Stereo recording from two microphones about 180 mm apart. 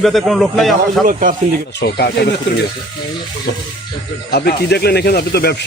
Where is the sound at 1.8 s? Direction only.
65° left (ahead or behind).